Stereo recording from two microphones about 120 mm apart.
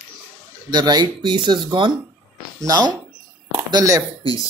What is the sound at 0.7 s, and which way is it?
Speech, 35° right (ahead or behind).